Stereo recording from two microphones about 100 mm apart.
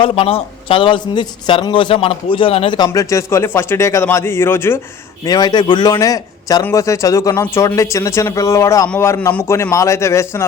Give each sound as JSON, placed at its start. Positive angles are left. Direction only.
{"t": 0.0, "sound": "a man's voice", "side_deg": 70}
{"t": 2.7, "sound": "speech", "side_deg": 40}
{"t": 5.2, "sound": "a man's voice", "side_deg": 45}